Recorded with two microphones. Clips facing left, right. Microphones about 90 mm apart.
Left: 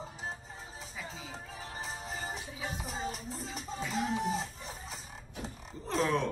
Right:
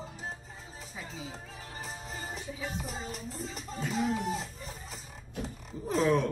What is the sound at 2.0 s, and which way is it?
Music, 35° left (ahead or behind).